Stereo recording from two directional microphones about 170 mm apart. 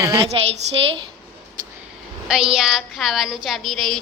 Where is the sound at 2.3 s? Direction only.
5° right (ahead or behind).